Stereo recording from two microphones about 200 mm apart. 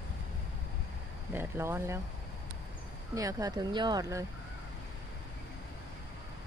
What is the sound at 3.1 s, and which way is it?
Speech, 15° right (ahead or behind).